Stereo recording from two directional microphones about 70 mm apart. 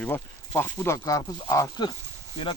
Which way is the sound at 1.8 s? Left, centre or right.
Left.